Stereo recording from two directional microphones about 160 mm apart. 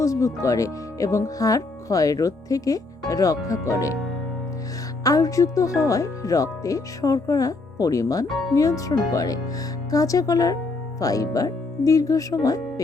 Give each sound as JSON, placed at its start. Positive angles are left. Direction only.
{"t": 0.0, "sound": "speech", "side_deg": 20}
{"t": 5.0, "sound": "speech", "side_deg": 20}
{"t": 8.3, "sound": "speech", "side_deg": 0}
{"t": 8.5, "sound": "speech", "side_deg": 20}